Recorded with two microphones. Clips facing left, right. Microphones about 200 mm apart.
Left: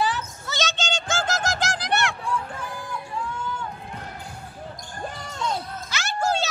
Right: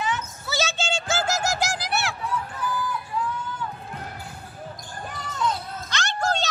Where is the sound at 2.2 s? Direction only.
30° left (ahead or behind).